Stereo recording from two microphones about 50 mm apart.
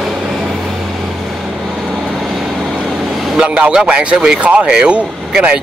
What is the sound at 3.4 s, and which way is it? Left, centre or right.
Speech, centre.